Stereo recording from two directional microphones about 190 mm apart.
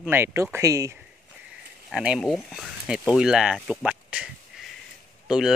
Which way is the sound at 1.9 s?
5° right (ahead or behind).